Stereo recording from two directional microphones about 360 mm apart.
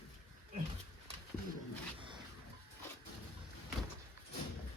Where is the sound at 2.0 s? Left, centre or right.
Centre.